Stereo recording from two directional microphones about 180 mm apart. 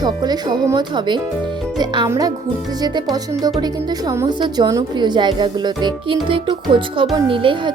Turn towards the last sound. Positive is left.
turn(degrees=-30)  # may be behind; listen again after turning